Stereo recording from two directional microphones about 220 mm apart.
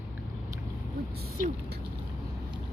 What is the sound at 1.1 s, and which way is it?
Speech, 45° right (ahead or behind).